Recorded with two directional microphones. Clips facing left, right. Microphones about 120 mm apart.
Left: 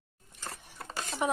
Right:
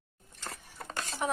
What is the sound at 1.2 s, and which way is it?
Speech, 10° left (ahead or behind).